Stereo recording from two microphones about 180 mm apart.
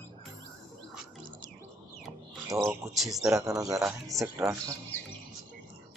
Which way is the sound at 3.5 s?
20° right (ahead or behind).